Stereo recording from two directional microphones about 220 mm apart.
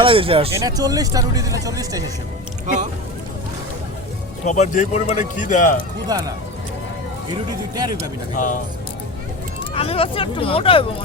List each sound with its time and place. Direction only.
0.0 s speech: 25° right (ahead or behind)
4.4 s a man's voice: 30° left (ahead or behind)
6.1 s speech: 15° right (ahead or behind)
7.8 s speech: 20° right (ahead or behind)
9.7 s speech: 25° left (ahead or behind)